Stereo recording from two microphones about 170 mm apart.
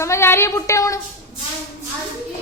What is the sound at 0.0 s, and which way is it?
Speech, 15° left (ahead or behind).